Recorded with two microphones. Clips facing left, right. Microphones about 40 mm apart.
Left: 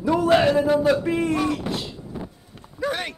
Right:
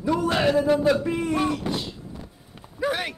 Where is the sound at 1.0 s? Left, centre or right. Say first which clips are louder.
Left 3 dB; centre.